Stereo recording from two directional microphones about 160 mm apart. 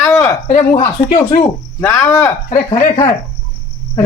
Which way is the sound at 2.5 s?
40° left (ahead or behind).